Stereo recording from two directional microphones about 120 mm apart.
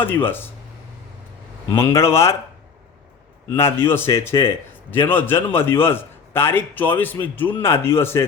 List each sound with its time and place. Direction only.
0.0 s speech: 15° left (ahead or behind)
2.0 s a man's voice: 20° left (ahead or behind)
3.5 s a man's voice: 20° left (ahead or behind)